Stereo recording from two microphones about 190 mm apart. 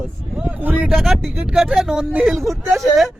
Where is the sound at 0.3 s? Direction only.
5° right (ahead or behind).